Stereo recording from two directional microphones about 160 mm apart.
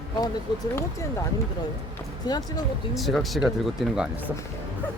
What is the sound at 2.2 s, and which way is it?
Speech, 25° left (ahead or behind).